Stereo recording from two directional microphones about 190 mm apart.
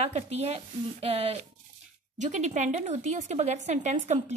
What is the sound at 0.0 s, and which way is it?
A woman's voice, 35° right (ahead or behind).